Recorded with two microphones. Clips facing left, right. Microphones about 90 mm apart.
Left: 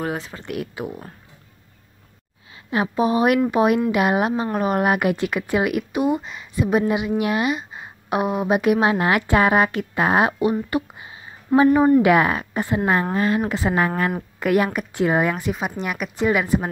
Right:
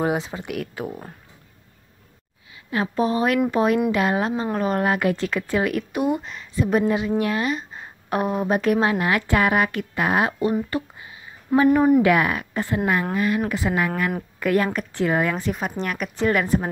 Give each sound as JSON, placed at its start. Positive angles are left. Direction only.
{"t": 0.0, "sound": "speech", "side_deg": -20}
{"t": 0.5, "sound": "speech", "side_deg": 0}
{"t": 2.5, "sound": "a woman's voice", "side_deg": 20}
{"t": 5.9, "sound": "a woman's voice", "side_deg": 0}
{"t": 8.9, "sound": "a woman's voice", "side_deg": 25}
{"t": 10.7, "sound": "a sound", "side_deg": 20}
{"t": 12.0, "sound": "a woman's voice", "side_deg": 25}
{"t": 13.1, "sound": "a woman's voice", "side_deg": 30}
{"t": 14.4, "sound": "a woman's voice", "side_deg": 15}
{"t": 15.3, "sound": "speech", "side_deg": 5}